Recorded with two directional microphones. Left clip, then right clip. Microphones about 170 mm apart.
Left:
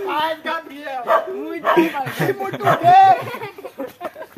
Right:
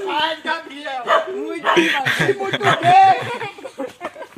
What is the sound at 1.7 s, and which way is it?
Speech, centre (ahead or behind).